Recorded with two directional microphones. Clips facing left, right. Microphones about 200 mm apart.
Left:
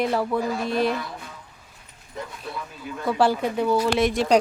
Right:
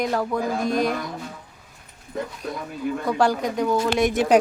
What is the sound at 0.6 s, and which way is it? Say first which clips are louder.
Speech: right 1 dB; 45° right (ahead or behind).